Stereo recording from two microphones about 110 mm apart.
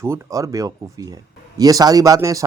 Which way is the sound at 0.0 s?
25° right (ahead or behind).